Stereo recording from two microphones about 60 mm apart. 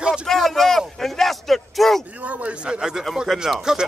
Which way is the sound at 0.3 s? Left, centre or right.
Centre.